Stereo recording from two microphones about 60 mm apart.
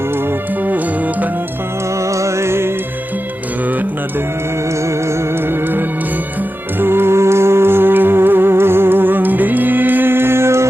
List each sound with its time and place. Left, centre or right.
2.0 s music: right
6.7 s music: right